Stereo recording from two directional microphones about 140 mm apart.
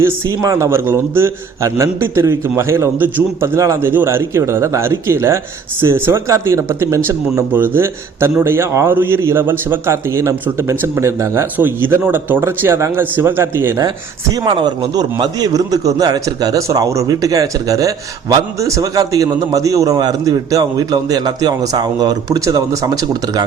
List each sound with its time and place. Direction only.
0.0 s a man's voice: 25° right (ahead or behind)
14.3 s a man's voice: 30° right (ahead or behind)